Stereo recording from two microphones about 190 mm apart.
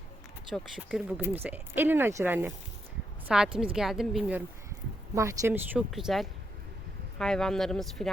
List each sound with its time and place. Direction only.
0.5 s a woman's voice: centre (ahead or behind)
5.1 s speech: 15° right (ahead or behind)
5.9 s a woman's voice: centre (ahead or behind)